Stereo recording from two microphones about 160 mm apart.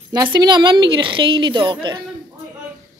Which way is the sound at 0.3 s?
25° right (ahead or behind).